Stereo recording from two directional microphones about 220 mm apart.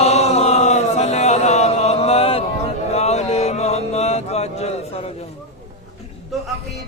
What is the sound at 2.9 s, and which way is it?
Mantra, 30° left (ahead or behind).